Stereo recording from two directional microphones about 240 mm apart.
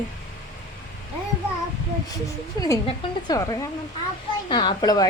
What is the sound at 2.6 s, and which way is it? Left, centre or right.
A woman's voice, centre.